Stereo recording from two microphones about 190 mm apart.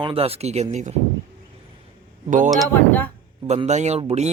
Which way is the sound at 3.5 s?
35° right (ahead or behind).